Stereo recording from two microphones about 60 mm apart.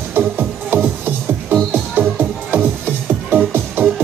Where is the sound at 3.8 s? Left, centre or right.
Right.